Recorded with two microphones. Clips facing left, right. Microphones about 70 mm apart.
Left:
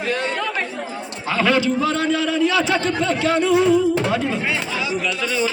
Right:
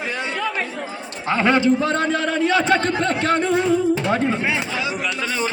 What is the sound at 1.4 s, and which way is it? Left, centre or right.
A man's voice, right.